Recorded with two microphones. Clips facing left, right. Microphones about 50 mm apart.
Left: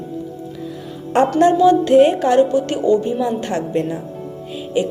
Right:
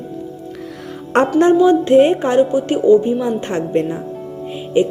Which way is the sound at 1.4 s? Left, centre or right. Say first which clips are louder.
Even; right.